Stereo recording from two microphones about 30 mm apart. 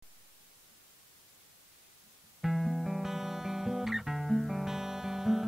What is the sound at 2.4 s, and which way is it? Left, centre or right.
Music, centre.